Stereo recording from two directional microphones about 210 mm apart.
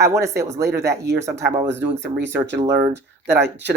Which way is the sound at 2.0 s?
55° right (ahead or behind).